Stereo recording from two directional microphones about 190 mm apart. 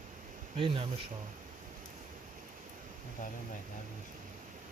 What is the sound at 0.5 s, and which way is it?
Speech, 30° right (ahead or behind).